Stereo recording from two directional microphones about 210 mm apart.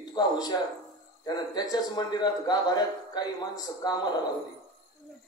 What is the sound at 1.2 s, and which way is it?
A man's voice, 20° left (ahead or behind).